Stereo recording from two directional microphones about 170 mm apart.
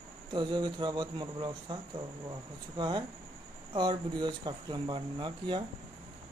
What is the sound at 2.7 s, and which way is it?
Speech, 25° right (ahead or behind).